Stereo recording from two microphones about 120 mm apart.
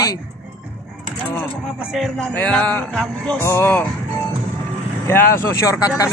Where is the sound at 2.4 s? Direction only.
10° left (ahead or behind).